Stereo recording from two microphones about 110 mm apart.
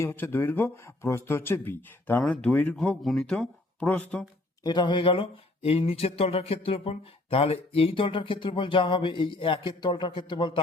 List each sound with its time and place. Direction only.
0.0 s speech: 20° left (ahead or behind)
4.6 s speech: 45° left (ahead or behind)